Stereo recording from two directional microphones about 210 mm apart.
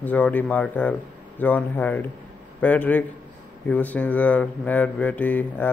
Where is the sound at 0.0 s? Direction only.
5° left (ahead or behind).